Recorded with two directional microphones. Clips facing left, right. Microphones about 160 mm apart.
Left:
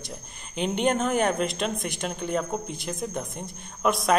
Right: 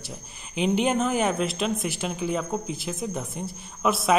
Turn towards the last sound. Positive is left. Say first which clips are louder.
# even
turn(degrees=-5)  # may be behind; listen again after turning